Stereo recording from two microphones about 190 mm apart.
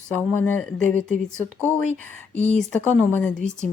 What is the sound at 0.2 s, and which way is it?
Speech, 10° left (ahead or behind).